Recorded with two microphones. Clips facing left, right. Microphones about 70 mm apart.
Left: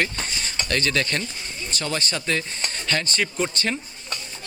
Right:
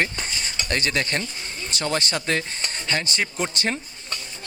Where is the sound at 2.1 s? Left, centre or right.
Right.